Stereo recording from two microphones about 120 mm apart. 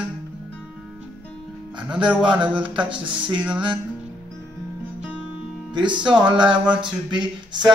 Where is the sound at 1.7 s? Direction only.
10° right (ahead or behind).